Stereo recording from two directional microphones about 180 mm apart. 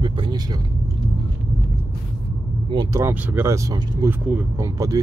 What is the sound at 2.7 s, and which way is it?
Speech, 20° right (ahead or behind).